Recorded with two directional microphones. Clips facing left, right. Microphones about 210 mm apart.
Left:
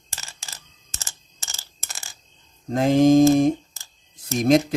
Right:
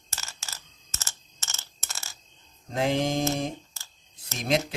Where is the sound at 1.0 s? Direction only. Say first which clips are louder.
Left 1 dB; 15° left (ahead or behind).